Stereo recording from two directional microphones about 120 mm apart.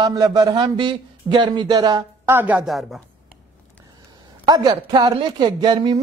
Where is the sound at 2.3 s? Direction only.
15° right (ahead or behind).